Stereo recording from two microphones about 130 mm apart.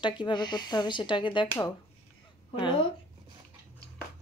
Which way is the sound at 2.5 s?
40° left (ahead or behind).